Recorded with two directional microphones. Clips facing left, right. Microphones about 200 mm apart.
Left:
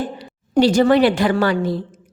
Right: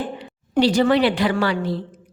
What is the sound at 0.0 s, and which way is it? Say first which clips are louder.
A woman's voice: left 2 dB; 40° left (ahead or behind).